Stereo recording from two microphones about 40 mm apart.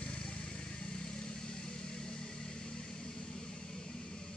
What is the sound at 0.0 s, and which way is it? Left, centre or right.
Vehicle, left.